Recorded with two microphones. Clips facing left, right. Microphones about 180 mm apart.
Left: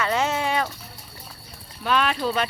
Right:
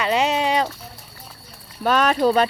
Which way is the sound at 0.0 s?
15° right (ahead or behind).